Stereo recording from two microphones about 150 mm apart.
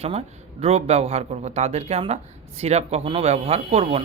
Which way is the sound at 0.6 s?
45° right (ahead or behind).